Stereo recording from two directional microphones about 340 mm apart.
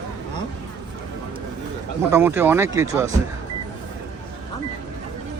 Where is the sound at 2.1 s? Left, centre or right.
Centre.